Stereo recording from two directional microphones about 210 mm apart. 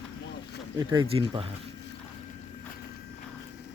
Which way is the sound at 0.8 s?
20° right (ahead or behind).